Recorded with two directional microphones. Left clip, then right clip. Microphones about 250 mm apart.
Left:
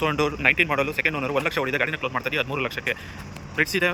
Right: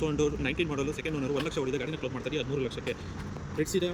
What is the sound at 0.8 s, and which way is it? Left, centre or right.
Speech, left.